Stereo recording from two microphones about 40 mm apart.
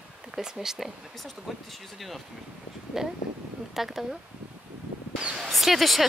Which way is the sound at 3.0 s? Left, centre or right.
Centre.